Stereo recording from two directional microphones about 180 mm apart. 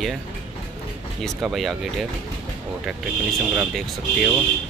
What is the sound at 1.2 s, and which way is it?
Speech, centre (ahead or behind).